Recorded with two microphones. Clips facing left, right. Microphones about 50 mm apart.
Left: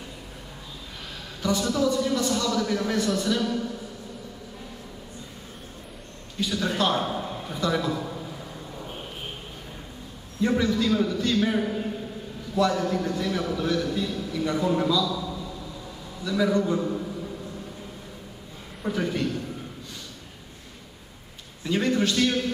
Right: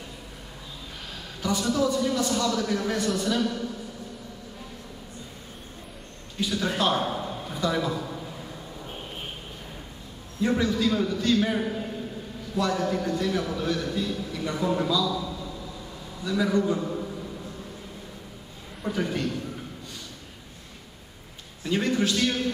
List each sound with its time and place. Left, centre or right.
1.4 s speech: centre
6.4 s a man's voice: centre
10.4 s speech: centre
16.3 s a man's voice: centre
18.8 s a man's voice: centre
21.6 s a man's voice: centre